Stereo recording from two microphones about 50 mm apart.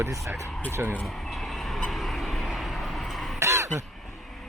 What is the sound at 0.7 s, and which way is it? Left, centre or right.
Speech, right.